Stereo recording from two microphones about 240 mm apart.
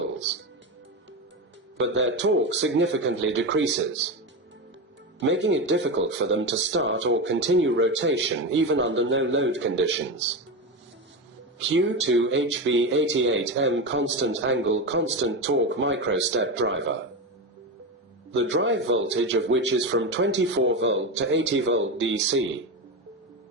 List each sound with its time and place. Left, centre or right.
1.8 s speech: right
5.2 s speech: right
11.7 s speech: right
18.3 s speech: right